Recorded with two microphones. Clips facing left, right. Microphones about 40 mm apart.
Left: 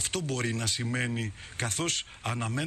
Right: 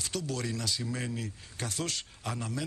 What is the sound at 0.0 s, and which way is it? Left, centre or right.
Speech, left.